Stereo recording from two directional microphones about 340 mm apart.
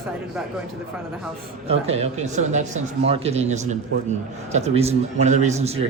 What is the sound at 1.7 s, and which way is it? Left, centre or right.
A man's voice, centre.